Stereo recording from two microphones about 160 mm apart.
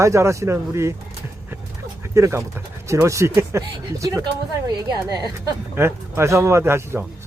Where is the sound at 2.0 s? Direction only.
20° right (ahead or behind).